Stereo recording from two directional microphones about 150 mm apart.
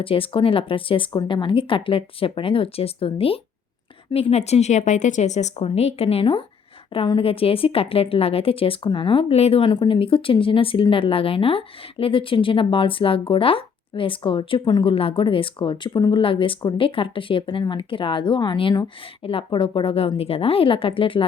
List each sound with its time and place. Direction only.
0.0 s a woman's voice: 35° left (ahead or behind)